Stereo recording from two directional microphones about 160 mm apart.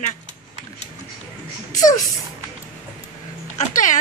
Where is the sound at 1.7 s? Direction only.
20° left (ahead or behind).